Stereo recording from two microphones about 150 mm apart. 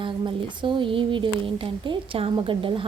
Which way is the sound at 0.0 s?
30° right (ahead or behind).